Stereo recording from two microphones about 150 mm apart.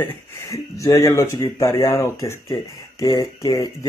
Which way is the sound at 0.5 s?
20° left (ahead or behind).